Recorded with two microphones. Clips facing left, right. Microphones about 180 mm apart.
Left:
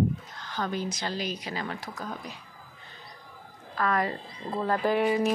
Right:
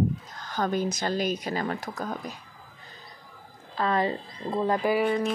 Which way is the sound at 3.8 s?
25° right (ahead or behind).